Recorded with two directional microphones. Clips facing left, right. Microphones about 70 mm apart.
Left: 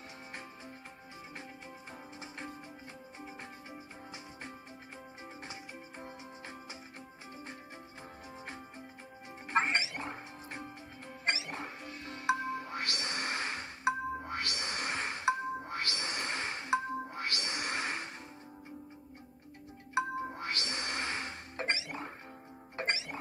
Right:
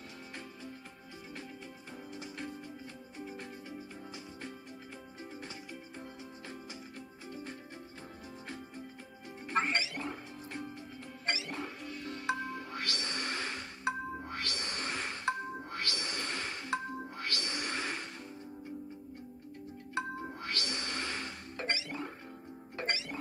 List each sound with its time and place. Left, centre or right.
2.1 s music: left
5.2 s music: left
9.5 s music: left
19.9 s music: centre